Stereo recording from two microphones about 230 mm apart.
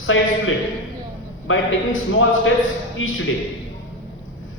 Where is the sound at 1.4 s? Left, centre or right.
Left.